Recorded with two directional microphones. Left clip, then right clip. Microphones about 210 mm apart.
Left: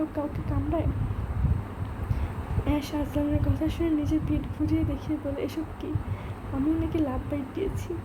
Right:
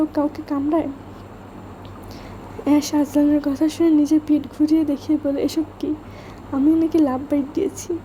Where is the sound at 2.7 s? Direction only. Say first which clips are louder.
Right 11 dB; 40° right (ahead or behind).